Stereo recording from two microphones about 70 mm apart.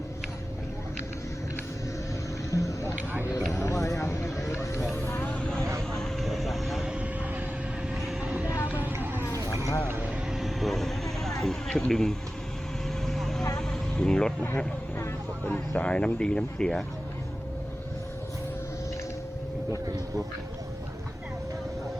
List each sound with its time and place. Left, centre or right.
2.5 s music: left
2.9 s speech: right
3.5 s speech: left
5.0 s vehicle: left
5.3 s vehicle: centre
6.9 s vehicle: centre
7.9 s a sound: centre
8.6 s a sound: right
9.8 s speech: right
10.1 s vehicle: centre
11.4 s speech: centre
13.1 s vehicle: centre
15.4 s speech: left; by 16.8 s centre